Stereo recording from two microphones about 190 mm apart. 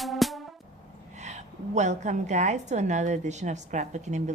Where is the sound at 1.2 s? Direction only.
40° right (ahead or behind).